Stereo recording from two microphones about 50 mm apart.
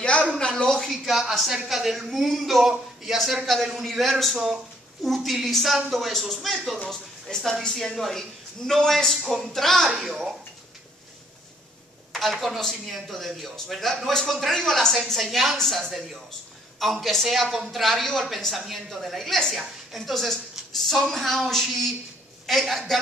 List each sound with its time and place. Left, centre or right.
0.4 s a sound: left
0.7 s speech: centre
9.9 s speech: centre
12.1 s speech: centre